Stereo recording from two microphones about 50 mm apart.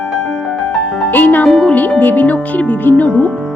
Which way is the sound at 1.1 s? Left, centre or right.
Left.